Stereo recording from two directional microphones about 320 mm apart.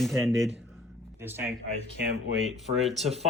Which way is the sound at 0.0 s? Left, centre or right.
Centre.